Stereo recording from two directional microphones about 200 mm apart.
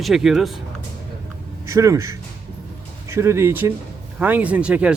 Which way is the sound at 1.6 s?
15° right (ahead or behind).